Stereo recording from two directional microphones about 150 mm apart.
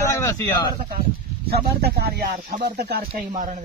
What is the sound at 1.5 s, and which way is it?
Speech, 90° right.